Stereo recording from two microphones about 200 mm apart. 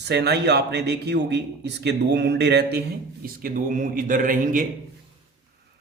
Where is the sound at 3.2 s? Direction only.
45° right (ahead or behind).